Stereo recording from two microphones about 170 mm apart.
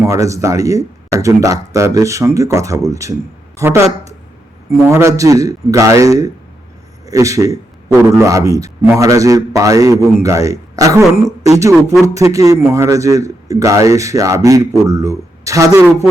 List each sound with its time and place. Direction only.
0.1 s a man's voice: 20° right (ahead or behind)
4.9 s a man's voice: 15° right (ahead or behind)